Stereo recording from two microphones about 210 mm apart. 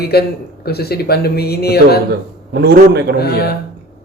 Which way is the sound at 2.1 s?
50° right (ahead or behind).